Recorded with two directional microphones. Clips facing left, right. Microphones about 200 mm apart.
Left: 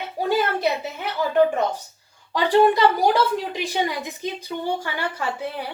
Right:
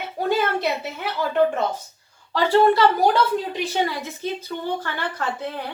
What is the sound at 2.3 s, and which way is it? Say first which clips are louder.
A woman's voice: even; 15° left (ahead or behind).